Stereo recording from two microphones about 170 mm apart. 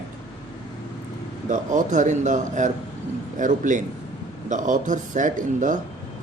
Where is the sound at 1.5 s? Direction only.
50° right (ahead or behind).